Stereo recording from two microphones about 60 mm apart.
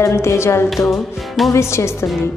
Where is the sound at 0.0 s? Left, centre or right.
Left.